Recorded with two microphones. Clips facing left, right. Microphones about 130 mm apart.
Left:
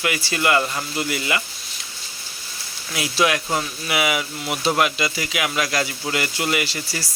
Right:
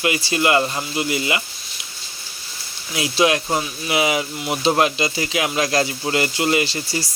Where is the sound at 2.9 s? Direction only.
25° right (ahead or behind).